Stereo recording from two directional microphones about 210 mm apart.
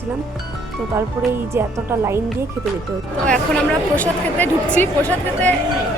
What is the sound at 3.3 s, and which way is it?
Speech, 5° left (ahead or behind).